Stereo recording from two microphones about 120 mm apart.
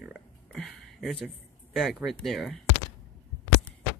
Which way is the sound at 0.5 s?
Centre (ahead or behind).